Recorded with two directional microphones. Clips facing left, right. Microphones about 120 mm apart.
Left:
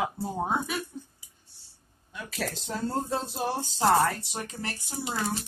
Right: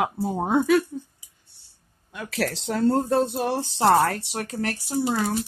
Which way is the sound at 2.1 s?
70° right (ahead or behind).